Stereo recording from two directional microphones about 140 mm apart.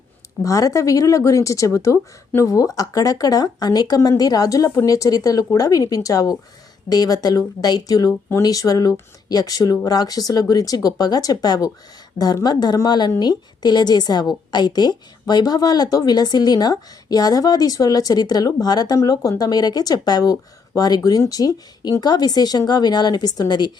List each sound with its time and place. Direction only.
0.4 s speech: 25° left (ahead or behind)